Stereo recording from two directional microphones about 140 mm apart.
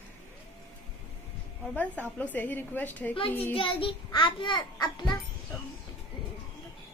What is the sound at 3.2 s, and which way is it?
A child's voice, 40° left (ahead or behind).